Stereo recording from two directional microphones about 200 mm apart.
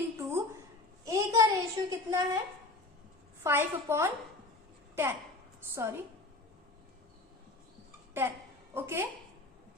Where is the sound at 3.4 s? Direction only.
10° right (ahead or behind).